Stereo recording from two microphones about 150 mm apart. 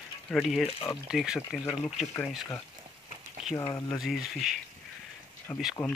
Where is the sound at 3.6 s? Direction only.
20° left (ahead or behind).